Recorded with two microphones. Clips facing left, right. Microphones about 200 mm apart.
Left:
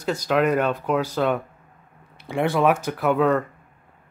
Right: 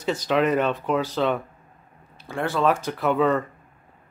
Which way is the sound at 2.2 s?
15° left (ahead or behind).